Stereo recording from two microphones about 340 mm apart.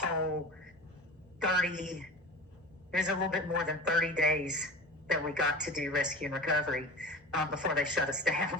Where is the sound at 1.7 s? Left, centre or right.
Right.